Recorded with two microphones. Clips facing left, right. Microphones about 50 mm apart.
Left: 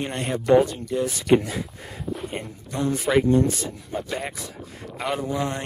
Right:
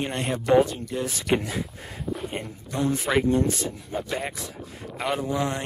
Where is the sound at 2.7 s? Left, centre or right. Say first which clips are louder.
Left 2 dB; centre.